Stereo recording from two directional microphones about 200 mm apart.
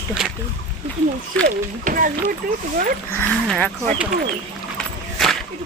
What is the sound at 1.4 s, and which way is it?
Speech, 45° right (ahead or behind).